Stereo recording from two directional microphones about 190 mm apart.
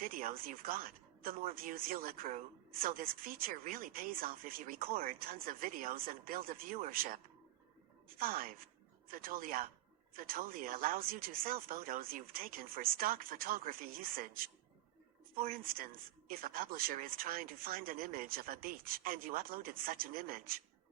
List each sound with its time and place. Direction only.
0.0 s speech: 45° right (ahead or behind)
8.2 s speech: 50° right (ahead or behind)